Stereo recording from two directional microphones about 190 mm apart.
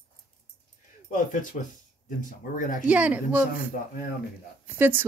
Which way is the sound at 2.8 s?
5° right (ahead or behind).